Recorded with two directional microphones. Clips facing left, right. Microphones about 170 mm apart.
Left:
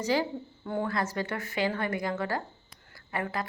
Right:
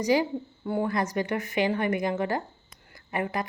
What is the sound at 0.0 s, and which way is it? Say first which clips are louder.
A woman's voice: right 4 dB; 15° right (ahead or behind).